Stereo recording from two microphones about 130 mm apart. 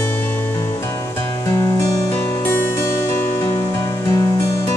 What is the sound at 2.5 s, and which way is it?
Music, 20° left (ahead or behind).